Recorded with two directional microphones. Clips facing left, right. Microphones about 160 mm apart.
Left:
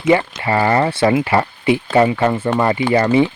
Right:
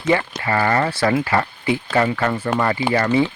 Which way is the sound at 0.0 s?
25° left (ahead or behind).